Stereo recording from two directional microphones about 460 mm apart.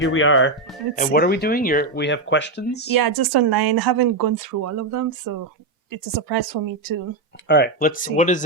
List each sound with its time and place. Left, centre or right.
0.0 s speech: left
2.9 s a woman's voice: right
7.4 s speech: left